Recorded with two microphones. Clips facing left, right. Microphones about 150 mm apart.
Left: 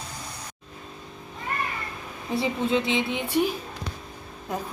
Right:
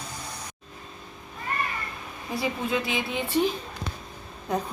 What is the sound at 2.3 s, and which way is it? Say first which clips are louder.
A woman's voice: left 3 dB; 25° left (ahead or behind).